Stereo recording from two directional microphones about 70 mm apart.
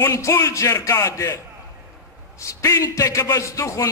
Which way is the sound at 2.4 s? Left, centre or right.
Left.